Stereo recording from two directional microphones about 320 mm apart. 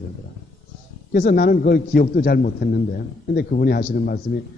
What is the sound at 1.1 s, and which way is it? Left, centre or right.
A man's voice, left.